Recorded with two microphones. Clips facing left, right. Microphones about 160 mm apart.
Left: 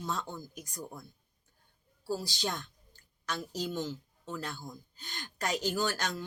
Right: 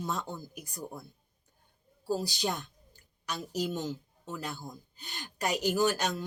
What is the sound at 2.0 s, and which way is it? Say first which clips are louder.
Speech: right 3 dB; 15° right (ahead or behind).